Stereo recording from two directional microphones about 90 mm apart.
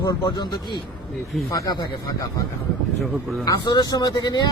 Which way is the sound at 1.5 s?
45° left (ahead or behind).